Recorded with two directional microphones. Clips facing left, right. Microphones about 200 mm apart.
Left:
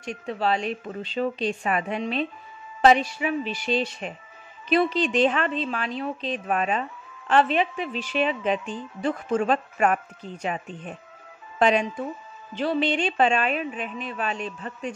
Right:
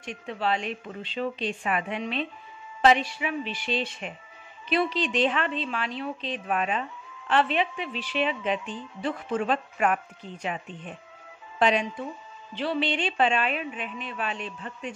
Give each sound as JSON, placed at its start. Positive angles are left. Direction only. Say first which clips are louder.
{"t": 0.0, "sound": "a woman's voice", "louder": "left 3 dB", "side_deg": 40}